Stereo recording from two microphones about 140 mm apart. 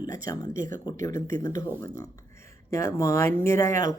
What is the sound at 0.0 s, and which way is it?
Speech, 25° left (ahead or behind).